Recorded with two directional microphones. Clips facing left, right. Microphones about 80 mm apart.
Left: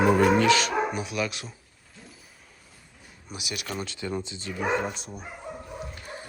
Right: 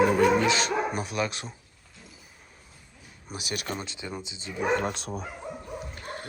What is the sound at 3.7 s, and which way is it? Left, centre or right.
Speech, right.